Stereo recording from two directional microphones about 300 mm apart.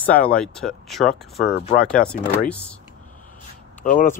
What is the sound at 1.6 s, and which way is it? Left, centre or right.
Speech, left.